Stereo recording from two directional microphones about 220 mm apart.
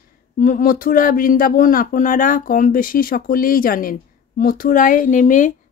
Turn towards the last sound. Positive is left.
turn(degrees=35)  # may be behind; listen again after turning